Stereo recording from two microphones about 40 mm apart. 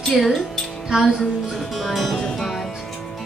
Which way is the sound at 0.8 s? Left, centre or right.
Centre.